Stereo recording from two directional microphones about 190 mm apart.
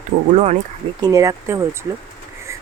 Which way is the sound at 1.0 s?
20° right (ahead or behind).